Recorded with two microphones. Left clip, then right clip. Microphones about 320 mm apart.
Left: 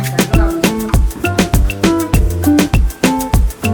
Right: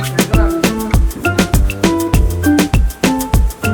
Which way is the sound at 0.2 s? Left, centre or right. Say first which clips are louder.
Even; centre.